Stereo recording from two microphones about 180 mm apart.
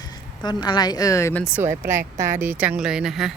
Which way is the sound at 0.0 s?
25° left (ahead or behind).